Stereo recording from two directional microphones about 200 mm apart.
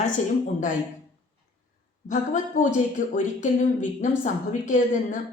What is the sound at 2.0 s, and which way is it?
Speech, 40° left (ahead or behind).